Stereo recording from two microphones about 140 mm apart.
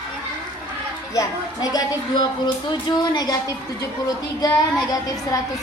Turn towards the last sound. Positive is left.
turn(degrees=25)  # may be behind; listen again after turning